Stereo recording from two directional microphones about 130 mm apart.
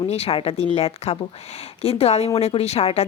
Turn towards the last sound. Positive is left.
turn(degrees=50)  # may be behind; listen again after turning